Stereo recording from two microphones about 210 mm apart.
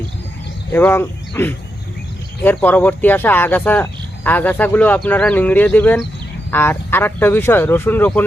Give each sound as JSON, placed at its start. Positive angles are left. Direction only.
{"t": 0.7, "sound": "speech", "side_deg": 10}